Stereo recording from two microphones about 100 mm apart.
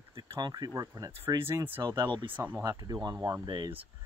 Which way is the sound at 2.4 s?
25° right (ahead or behind).